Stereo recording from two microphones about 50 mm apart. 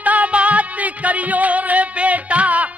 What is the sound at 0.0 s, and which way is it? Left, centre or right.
Music, right.